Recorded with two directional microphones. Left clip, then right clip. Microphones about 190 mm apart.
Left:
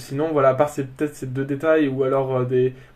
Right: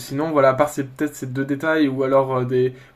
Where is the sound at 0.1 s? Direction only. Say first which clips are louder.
Right 1 dB; 35° right (ahead or behind).